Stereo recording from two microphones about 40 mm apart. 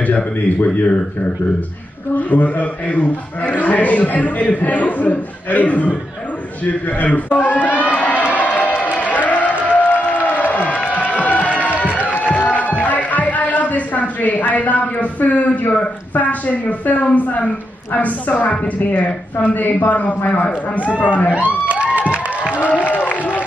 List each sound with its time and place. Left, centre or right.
0.0 s a man's voice: left
2.1 s a man's voice: left
6.6 s crowd: left
9.7 s music: left
10.2 s crowd: left
12.1 s music: left
16.8 s a man's voice: left
21.6 s a sound: right
22.8 s a sound: left